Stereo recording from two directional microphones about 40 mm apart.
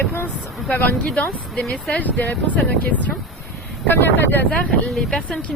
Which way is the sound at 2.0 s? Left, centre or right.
Left.